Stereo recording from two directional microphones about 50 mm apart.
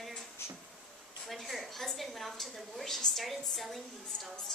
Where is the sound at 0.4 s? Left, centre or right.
Left.